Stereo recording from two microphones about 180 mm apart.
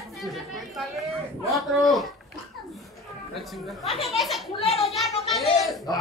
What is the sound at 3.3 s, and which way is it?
Speech, centre (ahead or behind).